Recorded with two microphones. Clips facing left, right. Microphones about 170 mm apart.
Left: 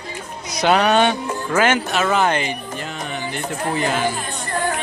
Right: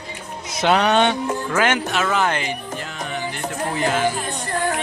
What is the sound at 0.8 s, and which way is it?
Music, 5° left (ahead or behind).